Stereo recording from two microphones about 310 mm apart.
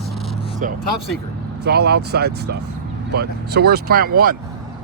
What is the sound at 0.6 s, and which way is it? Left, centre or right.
Speech, right.